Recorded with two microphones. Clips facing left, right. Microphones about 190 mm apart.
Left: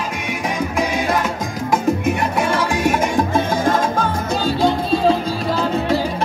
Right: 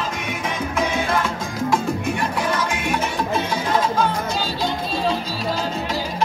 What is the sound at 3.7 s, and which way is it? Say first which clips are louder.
Music: left 2 dB; 50° left (ahead or behind).